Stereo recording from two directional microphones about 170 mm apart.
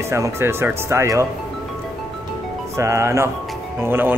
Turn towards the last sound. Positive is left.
turn(degrees=-10)  # may be behind; listen again after turning